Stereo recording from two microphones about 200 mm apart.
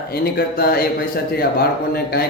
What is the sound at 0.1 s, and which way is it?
Speech, 50° left (ahead or behind).